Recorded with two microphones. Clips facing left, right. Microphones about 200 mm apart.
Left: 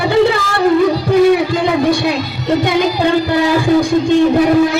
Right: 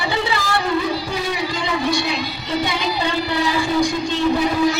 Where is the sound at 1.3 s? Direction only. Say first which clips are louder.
Left 10 dB; 55° left (ahead or behind).